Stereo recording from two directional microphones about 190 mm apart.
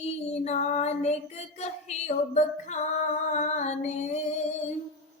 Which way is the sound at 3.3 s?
40° left (ahead or behind).